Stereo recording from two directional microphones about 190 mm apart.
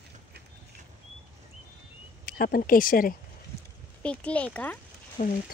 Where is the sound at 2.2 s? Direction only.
50° left (ahead or behind).